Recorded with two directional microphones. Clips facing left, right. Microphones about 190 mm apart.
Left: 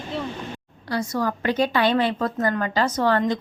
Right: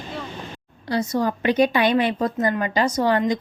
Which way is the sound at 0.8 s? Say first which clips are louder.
Right 3 dB; 20° right (ahead or behind).